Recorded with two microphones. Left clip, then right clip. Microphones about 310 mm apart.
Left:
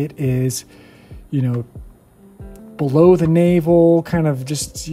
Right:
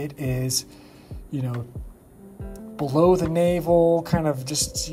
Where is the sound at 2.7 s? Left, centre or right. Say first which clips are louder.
Left 6 dB; left.